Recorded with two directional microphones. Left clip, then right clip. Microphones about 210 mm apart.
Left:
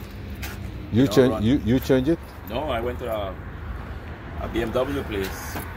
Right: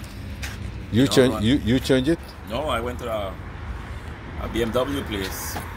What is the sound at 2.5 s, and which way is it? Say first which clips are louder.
Speech: right 1 dB; 45° right (ahead or behind).